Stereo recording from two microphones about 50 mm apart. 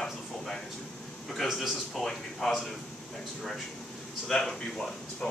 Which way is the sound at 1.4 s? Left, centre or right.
Centre.